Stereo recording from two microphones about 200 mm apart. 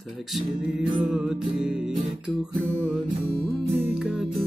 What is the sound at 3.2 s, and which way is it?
Music, 30° right (ahead or behind).